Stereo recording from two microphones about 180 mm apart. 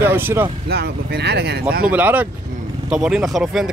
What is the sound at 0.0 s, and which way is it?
Speech, 10° right (ahead or behind).